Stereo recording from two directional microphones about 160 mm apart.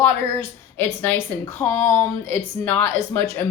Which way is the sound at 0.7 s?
15° left (ahead or behind).